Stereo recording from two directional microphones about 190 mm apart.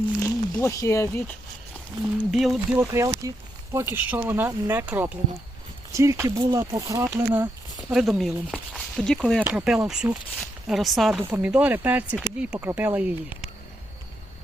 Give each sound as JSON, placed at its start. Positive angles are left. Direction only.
{"t": 0.2, "sound": "speech", "side_deg": 15}
{"t": 2.0, "sound": "speech", "side_deg": 0}
{"t": 2.7, "sound": "speech", "side_deg": -15}